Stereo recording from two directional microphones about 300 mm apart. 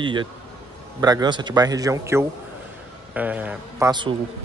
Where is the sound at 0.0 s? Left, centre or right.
Centre.